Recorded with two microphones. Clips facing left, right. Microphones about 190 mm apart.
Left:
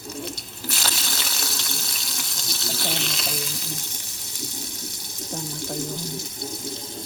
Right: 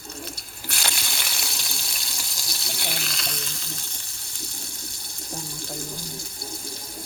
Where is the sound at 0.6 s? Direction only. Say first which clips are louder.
Left 2 dB; centre (ahead or behind).